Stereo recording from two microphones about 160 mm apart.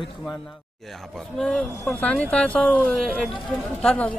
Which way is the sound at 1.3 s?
Centre (ahead or behind).